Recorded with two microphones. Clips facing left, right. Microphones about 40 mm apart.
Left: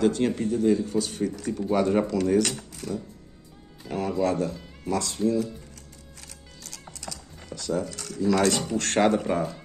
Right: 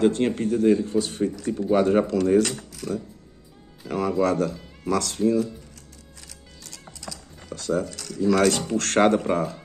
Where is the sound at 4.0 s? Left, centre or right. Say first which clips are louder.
Right 3 dB; right.